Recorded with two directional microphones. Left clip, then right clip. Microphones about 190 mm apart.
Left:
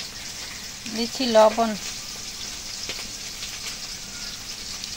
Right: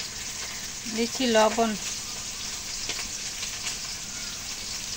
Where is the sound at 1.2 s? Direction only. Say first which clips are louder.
Left 5 dB; 15° left (ahead or behind).